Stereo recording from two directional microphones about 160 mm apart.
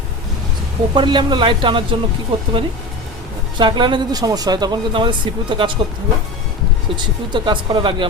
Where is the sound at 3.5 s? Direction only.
30° right (ahead or behind).